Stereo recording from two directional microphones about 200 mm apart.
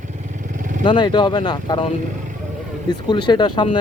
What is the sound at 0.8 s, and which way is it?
Speech, 25° left (ahead or behind).